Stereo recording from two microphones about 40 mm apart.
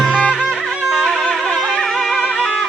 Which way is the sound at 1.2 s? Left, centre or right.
Centre.